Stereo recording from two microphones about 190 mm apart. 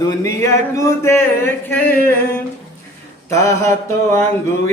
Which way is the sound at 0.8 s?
15° left (ahead or behind).